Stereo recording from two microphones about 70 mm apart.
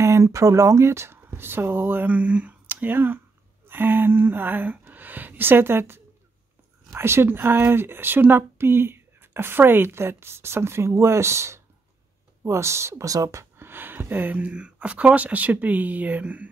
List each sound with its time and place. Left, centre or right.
0.0 s speech: right